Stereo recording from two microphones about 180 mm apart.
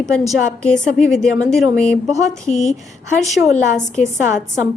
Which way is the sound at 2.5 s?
40° left (ahead or behind).